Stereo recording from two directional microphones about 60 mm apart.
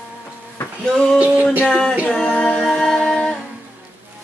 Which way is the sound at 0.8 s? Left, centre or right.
Centre.